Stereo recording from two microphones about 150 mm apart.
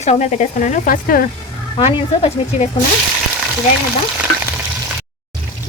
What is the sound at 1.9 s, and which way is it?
Speech, 40° left (ahead or behind).